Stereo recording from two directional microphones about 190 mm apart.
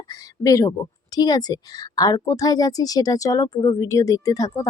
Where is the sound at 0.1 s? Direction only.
20° left (ahead or behind).